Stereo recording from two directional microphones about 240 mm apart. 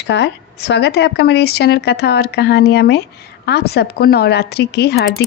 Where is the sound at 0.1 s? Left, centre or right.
Left.